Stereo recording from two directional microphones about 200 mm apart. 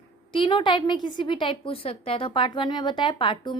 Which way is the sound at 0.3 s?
25° left (ahead or behind).